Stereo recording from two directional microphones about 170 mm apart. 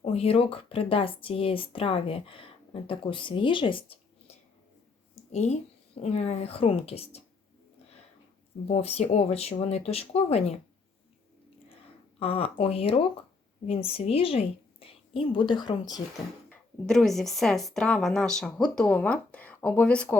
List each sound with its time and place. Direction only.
0.0 s speech: 35° left (ahead or behind)
8.6 s speech: 40° left (ahead or behind)
12.2 s a woman's voice: 35° left (ahead or behind)
16.5 s speech: 5° left (ahead or behind)